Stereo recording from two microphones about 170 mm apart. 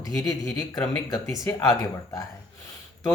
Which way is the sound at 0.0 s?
20° left (ahead or behind).